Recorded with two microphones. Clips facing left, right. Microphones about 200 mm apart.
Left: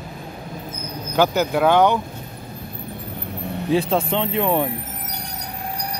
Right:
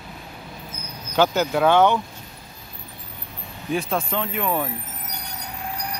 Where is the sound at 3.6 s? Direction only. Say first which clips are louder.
Left 5 dB; 30° left (ahead or behind).